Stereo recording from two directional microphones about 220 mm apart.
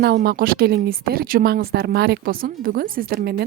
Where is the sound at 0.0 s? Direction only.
45° right (ahead or behind).